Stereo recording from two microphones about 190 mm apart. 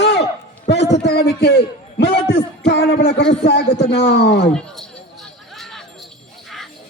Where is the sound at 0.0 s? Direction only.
65° left (ahead or behind).